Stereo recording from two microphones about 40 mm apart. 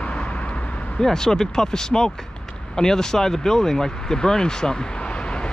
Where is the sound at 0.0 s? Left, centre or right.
Left.